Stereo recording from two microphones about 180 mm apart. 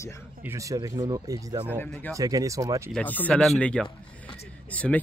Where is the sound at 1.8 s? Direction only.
10° left (ahead or behind).